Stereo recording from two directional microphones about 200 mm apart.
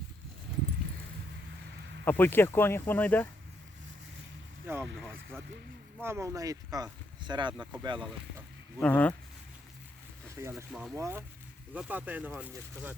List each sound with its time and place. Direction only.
2.0 s speech: 10° left (ahead or behind)
4.6 s vehicle: 10° right (ahead or behind)
4.9 s speech: 5° right (ahead or behind); by 8.0 s 25° right (ahead or behind)
8.8 s speech: 5° left (ahead or behind)
10.7 s speech: 5° right (ahead or behind)
10.9 s speech: 15° right (ahead or behind)